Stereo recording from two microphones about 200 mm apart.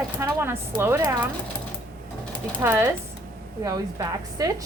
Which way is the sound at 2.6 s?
10° right (ahead or behind).